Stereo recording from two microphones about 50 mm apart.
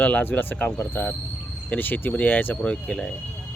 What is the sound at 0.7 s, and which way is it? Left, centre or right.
Speech, left.